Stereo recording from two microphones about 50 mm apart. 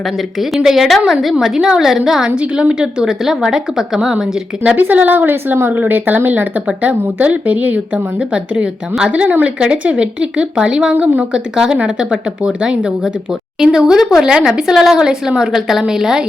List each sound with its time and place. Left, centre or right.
0.5 s a woman's voice: centre
4.8 s speech: right
6.7 s a woman's voice: right
10.9 s speech: right
11.2 s a woman's voice: centre
13.6 s a woman's voice: centre